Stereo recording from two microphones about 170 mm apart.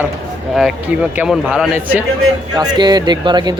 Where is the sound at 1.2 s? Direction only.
5° right (ahead or behind).